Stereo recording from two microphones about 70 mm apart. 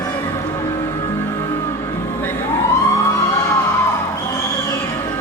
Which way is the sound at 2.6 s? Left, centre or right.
Left.